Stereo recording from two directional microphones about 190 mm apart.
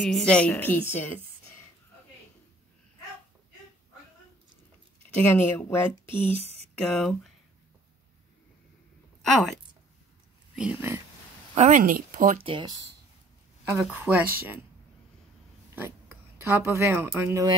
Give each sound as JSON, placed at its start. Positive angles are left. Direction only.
{"t": 0.0, "sound": "a woman's voice", "side_deg": 5}
{"t": 5.3, "sound": "a woman's voice", "side_deg": 10}
{"t": 6.3, "sound": "speech", "side_deg": -35}
{"t": 6.8, "sound": "speech", "side_deg": 5}
{"t": 10.5, "sound": "speech", "side_deg": -5}
{"t": 11.5, "sound": "speech", "side_deg": -40}
{"t": 12.4, "sound": "speech", "side_deg": -25}
{"t": 15.7, "sound": "speech", "side_deg": -10}